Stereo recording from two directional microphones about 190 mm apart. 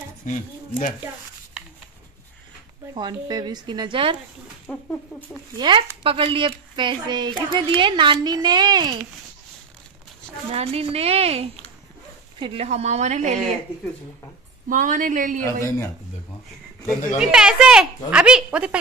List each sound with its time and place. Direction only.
0.2 s speech: 40° left (ahead or behind)
2.9 s speech: 20° right (ahead or behind)
4.7 s a woman's voice: 5° left (ahead or behind)
5.6 s speech: 25° right (ahead or behind)
10.5 s a woman's voice: 30° right (ahead or behind)
14.7 s speech: 45° right (ahead or behind)
17.2 s a woman's voice: 5° right (ahead or behind)